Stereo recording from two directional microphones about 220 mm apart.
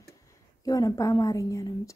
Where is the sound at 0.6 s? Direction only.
15° left (ahead or behind).